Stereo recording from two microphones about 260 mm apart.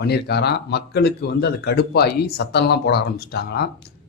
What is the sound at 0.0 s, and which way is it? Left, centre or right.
Speech, left.